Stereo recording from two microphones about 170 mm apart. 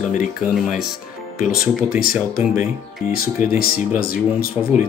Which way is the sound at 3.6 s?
60° left (ahead or behind).